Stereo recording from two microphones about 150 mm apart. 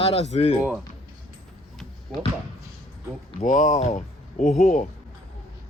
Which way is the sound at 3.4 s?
55° left (ahead or behind).